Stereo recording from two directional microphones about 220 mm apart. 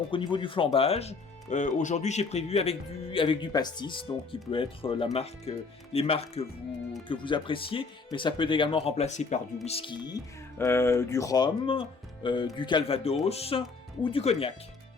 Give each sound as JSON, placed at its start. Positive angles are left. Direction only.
{"t": 0.1, "sound": "speech", "side_deg": 20}